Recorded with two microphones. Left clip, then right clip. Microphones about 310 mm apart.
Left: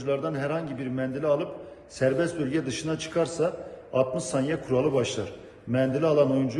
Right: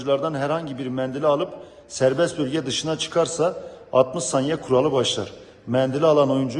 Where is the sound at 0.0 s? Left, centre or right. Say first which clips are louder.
Right 6 dB; centre.